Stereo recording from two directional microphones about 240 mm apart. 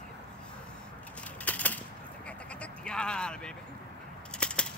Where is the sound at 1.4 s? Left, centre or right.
Centre.